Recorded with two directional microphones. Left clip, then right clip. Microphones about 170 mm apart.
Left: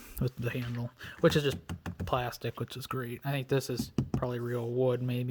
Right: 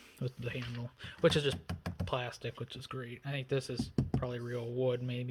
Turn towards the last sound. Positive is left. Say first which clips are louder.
# left 4 dB
turn(degrees=50)  # may be behind; listen again after turning